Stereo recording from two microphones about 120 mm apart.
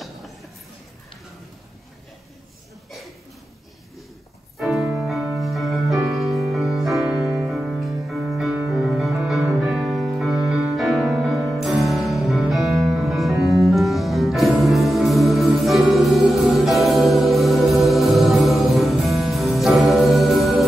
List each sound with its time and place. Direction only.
0.0 s music: centre (ahead or behind)
4.6 s music: centre (ahead or behind)
7.2 s music: 15° right (ahead or behind)
7.5 s music: 5° right (ahead or behind)